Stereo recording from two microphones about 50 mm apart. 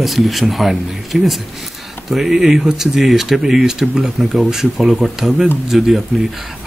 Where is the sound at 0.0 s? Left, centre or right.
Centre.